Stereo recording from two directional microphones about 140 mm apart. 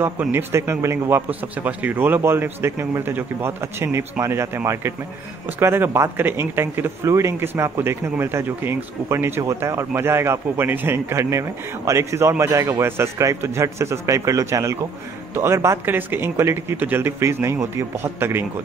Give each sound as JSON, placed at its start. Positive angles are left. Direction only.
{"t": 0.0, "sound": "a man's voice", "side_deg": -15}